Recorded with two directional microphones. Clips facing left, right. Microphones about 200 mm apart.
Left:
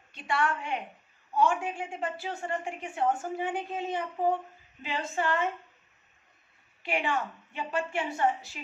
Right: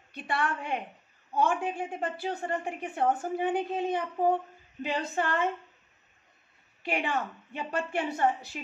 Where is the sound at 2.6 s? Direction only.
55° right (ahead or behind).